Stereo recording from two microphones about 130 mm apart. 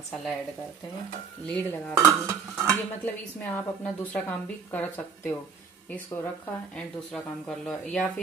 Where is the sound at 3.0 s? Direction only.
15° left (ahead or behind).